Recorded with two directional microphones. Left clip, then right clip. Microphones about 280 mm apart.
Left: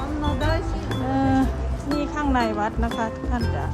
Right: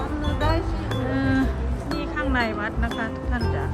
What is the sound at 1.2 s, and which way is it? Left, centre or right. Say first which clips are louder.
Music: left 3 dB; centre.